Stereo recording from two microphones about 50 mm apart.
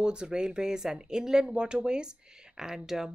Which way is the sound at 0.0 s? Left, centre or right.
Centre.